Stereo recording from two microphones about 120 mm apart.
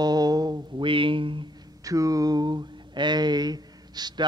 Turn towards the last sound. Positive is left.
turn(degrees=-35)  # may be behind; listen again after turning